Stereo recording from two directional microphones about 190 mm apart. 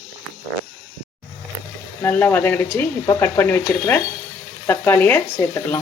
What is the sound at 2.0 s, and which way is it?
Speech, 10° left (ahead or behind).